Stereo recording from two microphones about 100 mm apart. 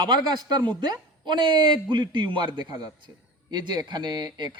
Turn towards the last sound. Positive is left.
turn(degrees=-50)  # may be behind; listen again after turning